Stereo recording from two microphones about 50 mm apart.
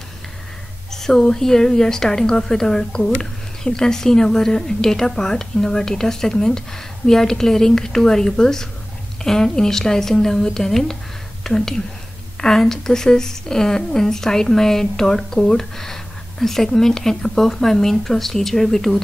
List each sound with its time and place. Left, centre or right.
0.9 s a woman's voice: centre